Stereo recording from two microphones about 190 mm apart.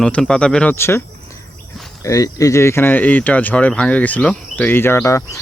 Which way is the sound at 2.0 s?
15° left (ahead or behind).